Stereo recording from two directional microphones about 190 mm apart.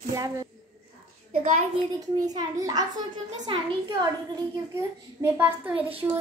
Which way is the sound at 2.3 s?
20° right (ahead or behind).